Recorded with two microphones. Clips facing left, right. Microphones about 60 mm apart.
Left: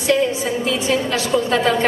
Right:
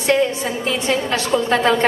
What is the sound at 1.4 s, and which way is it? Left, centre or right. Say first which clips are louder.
Speech: right 3 dB; right.